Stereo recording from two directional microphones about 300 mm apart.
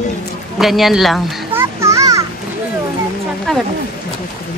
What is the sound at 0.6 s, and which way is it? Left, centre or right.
Children playing, centre.